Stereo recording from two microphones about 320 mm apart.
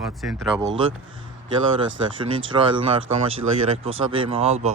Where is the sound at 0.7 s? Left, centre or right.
Centre.